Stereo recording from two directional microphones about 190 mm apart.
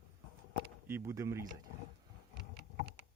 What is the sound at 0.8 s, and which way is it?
Speech, 10° right (ahead or behind).